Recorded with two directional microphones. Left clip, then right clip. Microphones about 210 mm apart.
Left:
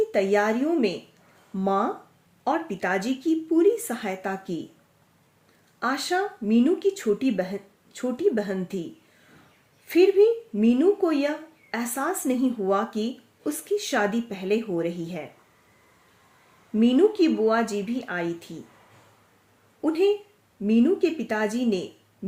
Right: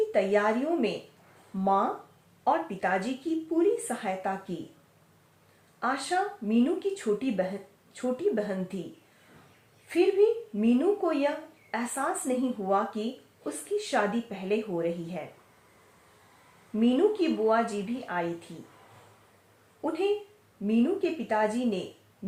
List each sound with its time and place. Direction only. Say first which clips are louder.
0.1 s speech: left 3 dB; 50° left (ahead or behind)
5.8 s speech: left 3 dB; 50° left (ahead or behind)
9.8 s speech: left 5 dB; 50° left (ahead or behind)
16.8 s speech: left 5 dB; 50° left (ahead or behind)
19.8 s speech: left 6 dB; 50° left (ahead or behind)